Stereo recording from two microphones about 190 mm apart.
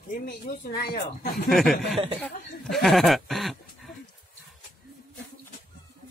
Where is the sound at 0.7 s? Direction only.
50° left (ahead or behind).